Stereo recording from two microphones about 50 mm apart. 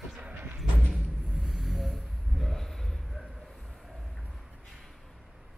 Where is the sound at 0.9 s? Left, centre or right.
Centre.